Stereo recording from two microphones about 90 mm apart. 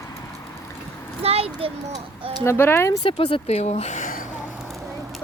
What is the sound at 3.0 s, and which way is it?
Speech, 75° left (ahead or behind).